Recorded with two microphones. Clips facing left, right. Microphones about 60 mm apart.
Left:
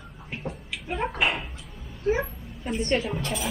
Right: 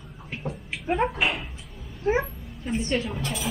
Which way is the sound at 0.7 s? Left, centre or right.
Right.